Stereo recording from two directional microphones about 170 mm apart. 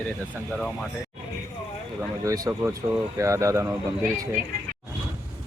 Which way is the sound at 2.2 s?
20° right (ahead or behind).